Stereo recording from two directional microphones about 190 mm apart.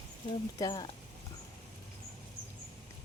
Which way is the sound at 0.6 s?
20° left (ahead or behind).